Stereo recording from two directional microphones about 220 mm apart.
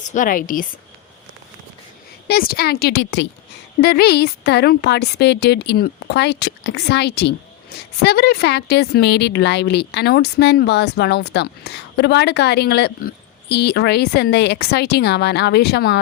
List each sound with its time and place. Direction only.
0.1 s a woman's voice: 35° left (ahead or behind)
2.2 s a woman's voice: 45° left (ahead or behind)